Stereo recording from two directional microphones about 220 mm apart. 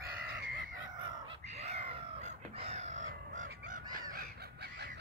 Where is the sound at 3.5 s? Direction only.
40° right (ahead or behind).